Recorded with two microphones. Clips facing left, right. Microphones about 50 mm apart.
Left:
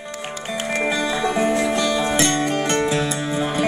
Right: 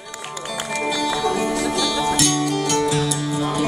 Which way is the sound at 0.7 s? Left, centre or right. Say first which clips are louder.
Left 1 dB; left.